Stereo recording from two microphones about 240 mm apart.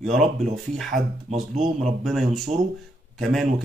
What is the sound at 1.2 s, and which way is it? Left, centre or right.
Speech, right.